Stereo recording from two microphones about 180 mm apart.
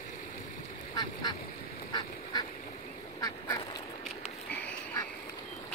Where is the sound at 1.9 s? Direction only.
25° left (ahead or behind).